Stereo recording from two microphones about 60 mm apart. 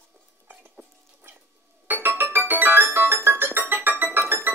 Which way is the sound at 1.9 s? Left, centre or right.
Right.